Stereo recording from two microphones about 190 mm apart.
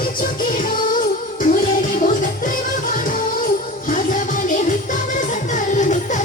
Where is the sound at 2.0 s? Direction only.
45° left (ahead or behind).